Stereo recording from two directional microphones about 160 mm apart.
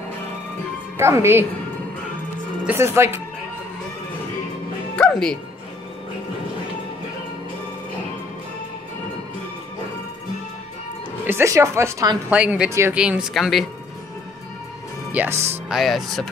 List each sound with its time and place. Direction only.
0.9 s speech: 15° right (ahead or behind)
2.6 s speech: 15° right (ahead or behind)
4.9 s speech: 5° left (ahead or behind)
11.2 s speech: 15° right (ahead or behind)
12.3 s speech: 10° right (ahead or behind)
15.1 s speech: 15° right (ahead or behind)
15.7 s speech: centre (ahead or behind)